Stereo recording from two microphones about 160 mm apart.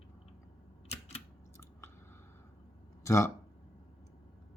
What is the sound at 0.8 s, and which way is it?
Camera, 40° left (ahead or behind).